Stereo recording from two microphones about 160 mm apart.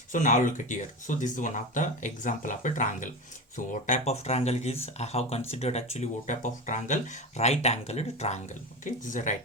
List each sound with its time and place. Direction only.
0.1 s speech: 55° left (ahead or behind)
8.8 s speech: 50° left (ahead or behind)